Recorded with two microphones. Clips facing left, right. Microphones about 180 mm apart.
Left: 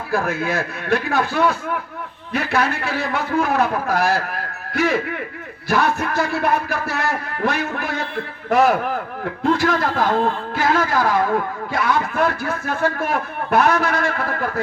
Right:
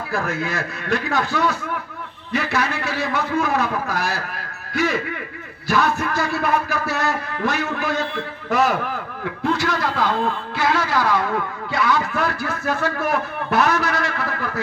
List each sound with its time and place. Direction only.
0.1 s a man's voice: 55° left (ahead or behind)